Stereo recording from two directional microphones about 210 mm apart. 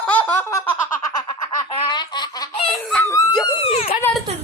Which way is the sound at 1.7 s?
20° left (ahead or behind).